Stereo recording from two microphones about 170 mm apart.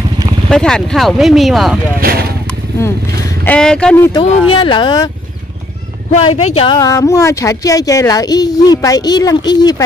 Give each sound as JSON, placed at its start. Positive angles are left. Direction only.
{"t": 0.5, "sound": "speech", "side_deg": 5}
{"t": 2.0, "sound": "speech", "side_deg": -65}
{"t": 3.4, "sound": "speech", "side_deg": 5}
{"t": 4.1, "sound": "speech", "side_deg": 30}
{"t": 6.3, "sound": "speech", "side_deg": 35}
{"t": 6.8, "sound": "speech", "side_deg": 20}